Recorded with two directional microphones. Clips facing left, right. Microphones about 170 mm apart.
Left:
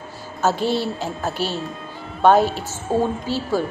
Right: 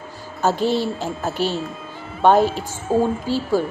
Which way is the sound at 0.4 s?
15° right (ahead or behind).